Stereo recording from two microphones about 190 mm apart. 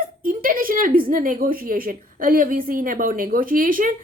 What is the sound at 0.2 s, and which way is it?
A woman's voice, 50° right (ahead or behind).